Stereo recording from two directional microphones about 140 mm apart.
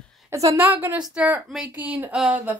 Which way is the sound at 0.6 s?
15° right (ahead or behind).